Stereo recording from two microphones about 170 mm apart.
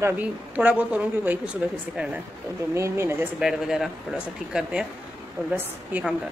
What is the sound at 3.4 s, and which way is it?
A woman's voice, 5° right (ahead or behind).